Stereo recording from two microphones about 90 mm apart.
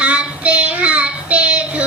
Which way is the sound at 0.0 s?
15° right (ahead or behind).